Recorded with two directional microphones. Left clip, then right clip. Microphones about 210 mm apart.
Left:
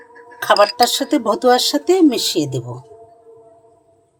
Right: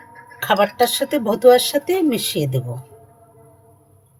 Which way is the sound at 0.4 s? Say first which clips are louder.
Left 4 dB; 30° left (ahead or behind).